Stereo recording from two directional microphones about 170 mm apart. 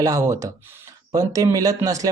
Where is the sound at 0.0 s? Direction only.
20° right (ahead or behind).